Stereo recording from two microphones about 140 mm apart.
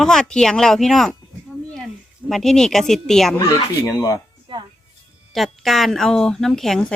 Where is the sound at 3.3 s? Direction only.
25° left (ahead or behind).